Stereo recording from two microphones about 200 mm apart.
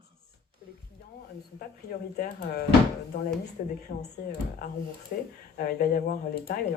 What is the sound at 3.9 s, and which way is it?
Speech, 50° left (ahead or behind).